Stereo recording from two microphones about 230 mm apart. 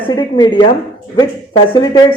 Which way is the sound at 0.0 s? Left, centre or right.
Left.